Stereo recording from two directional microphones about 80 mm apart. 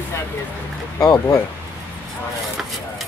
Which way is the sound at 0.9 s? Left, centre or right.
Left.